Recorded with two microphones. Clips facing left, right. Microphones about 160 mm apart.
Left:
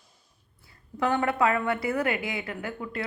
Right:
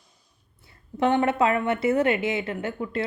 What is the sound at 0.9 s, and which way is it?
A woman's voice, 25° right (ahead or behind).